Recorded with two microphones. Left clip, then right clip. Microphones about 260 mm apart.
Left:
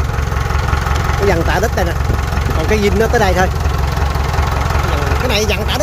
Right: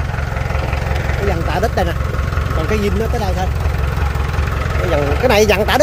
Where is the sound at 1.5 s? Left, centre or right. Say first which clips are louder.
Left 1 dB; centre.